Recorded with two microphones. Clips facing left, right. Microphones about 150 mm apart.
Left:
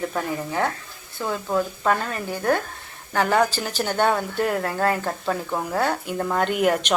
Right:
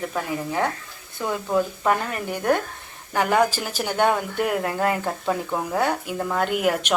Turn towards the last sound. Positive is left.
turn(degrees=-5)  # may be behind; listen again after turning